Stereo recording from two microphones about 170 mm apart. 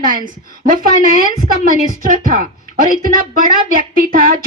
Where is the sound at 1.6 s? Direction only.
55° right (ahead or behind).